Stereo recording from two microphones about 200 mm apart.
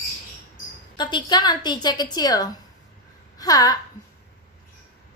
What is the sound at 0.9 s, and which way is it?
A woman's voice, 20° left (ahead or behind).